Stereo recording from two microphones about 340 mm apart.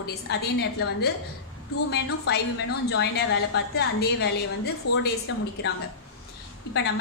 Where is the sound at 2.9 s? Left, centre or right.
Left.